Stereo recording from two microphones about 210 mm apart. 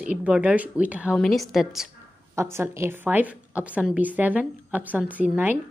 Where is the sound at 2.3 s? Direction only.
15° right (ahead or behind).